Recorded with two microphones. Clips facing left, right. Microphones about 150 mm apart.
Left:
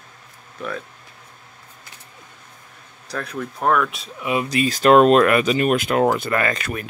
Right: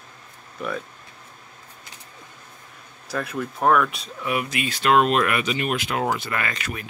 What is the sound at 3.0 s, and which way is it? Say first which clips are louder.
Speech: right 1 dB; 5° right (ahead or behind).